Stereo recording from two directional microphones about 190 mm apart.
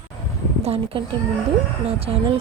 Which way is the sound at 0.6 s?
30° right (ahead or behind).